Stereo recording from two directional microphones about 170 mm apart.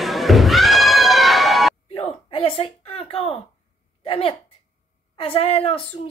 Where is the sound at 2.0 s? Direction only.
30° left (ahead or behind).